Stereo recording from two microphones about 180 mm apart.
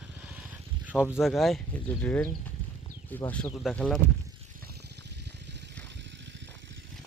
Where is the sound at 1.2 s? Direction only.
Centre (ahead or behind).